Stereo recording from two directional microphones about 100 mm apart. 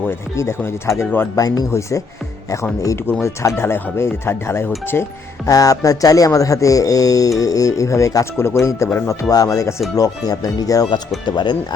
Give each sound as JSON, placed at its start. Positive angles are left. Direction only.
{"t": 0.1, "sound": "speech", "side_deg": 25}
{"t": 1.4, "sound": "speech", "side_deg": 40}
{"t": 3.1, "sound": "speech", "side_deg": 25}
{"t": 5.5, "sound": "speech", "side_deg": 35}
{"t": 11.3, "sound": "speech", "side_deg": 50}